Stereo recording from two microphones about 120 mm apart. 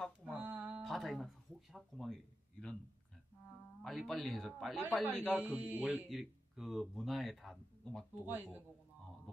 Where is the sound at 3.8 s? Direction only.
Centre (ahead or behind).